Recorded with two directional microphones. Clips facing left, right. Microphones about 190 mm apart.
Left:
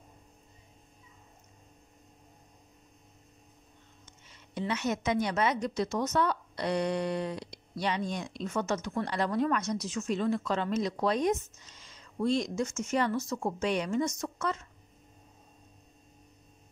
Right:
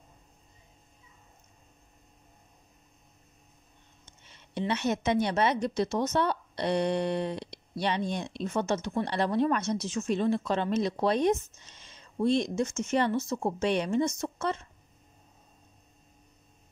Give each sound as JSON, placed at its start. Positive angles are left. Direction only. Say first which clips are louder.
{"t": 4.2, "sound": "a woman's voice", "louder": "right 3 dB", "side_deg": -30}